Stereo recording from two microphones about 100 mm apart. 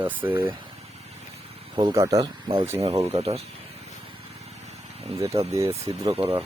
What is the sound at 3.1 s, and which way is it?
Speech, 90° right.